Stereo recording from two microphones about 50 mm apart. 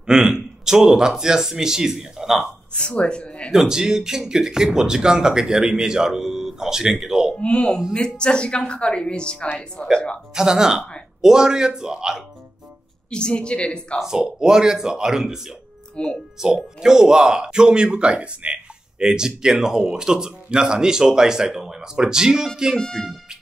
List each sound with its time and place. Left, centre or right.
0.0 s speech: centre
3.0 s speech: left
3.5 s speech: centre
7.3 s speech: left
10.3 s speech: centre
13.1 s speech: centre
13.9 s speech: centre
16.0 s speech: left
16.3 s speech: centre
22.8 s speech: centre